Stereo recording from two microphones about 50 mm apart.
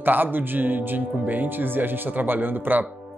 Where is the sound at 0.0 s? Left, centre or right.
Right.